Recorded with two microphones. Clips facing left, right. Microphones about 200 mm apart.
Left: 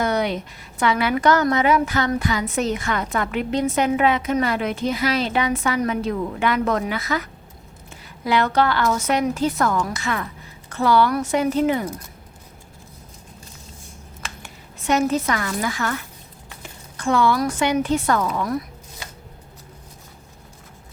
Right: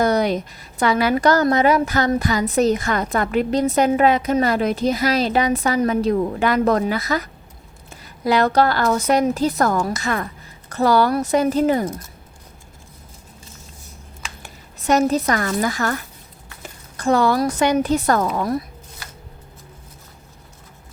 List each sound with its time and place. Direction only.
0.0 s a woman's voice: 40° right (ahead or behind)
14.4 s speech: 40° right (ahead or behind)
17.0 s a woman's voice: 40° right (ahead or behind)